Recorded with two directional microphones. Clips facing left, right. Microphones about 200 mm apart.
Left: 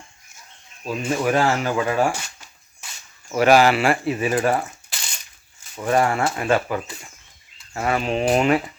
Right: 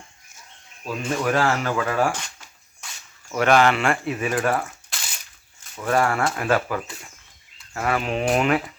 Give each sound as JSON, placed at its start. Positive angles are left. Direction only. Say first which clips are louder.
{"t": 0.9, "sound": "speech", "louder": "left 2 dB", "side_deg": 10}
{"t": 2.8, "sound": "a sound", "louder": "even", "side_deg": 5}
{"t": 3.3, "sound": "speech", "louder": "left 3 dB", "side_deg": 5}
{"t": 4.1, "sound": "speech", "louder": "left 3 dB", "side_deg": 30}
{"t": 4.9, "sound": "a sound", "louder": "even", "side_deg": -5}
{"t": 5.7, "sound": "speech", "louder": "left 2 dB", "side_deg": 15}
{"t": 6.2, "sound": "speech", "louder": "left 1 dB", "side_deg": 5}
{"t": 7.7, "sound": "speech", "louder": "left 1 dB", "side_deg": 15}
{"t": 8.0, "sound": "speech", "louder": "left 3 dB", "side_deg": 0}